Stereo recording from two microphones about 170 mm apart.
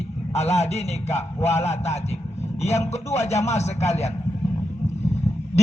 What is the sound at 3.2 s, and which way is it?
Speech, 40° left (ahead or behind).